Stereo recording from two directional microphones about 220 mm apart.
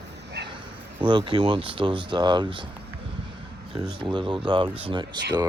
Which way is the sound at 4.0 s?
20° right (ahead or behind).